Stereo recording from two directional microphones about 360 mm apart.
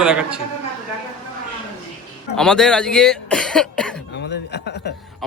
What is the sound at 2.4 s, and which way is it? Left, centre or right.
Speech, centre.